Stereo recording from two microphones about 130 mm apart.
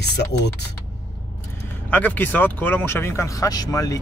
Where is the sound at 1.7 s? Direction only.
15° left (ahead or behind).